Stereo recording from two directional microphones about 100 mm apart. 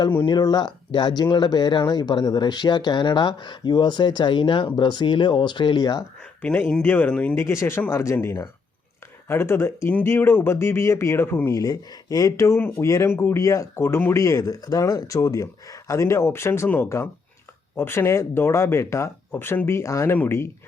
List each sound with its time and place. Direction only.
0.3 s speech: 45° left (ahead or behind)
6.4 s speech: 15° left (ahead or behind)
7.3 s speech: 25° left (ahead or behind)
11.5 s speech: 35° left (ahead or behind)